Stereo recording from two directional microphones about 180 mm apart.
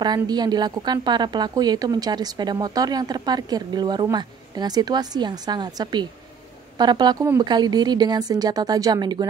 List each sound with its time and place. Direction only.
0.0 s a woman's voice: 25° right (ahead or behind)